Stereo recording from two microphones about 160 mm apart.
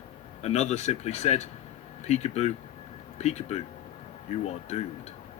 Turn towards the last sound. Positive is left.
turn(degrees=45)  # may be behind; listen again after turning